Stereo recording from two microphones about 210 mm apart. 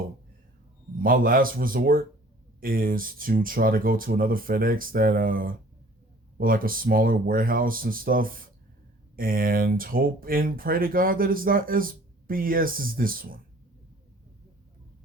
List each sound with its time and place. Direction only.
1.0 s speech: 45° right (ahead or behind)